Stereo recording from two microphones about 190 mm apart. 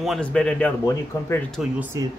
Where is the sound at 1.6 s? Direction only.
5° right (ahead or behind).